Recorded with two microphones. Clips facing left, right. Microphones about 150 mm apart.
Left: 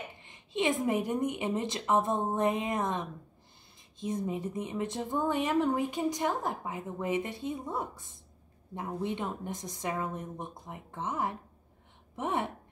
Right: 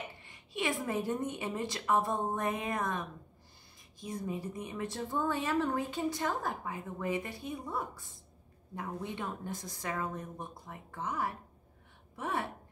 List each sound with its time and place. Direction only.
0.2 s speech: 20° left (ahead or behind)